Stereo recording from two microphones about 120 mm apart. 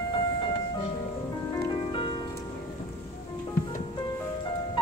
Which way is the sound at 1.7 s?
45° left (ahead or behind).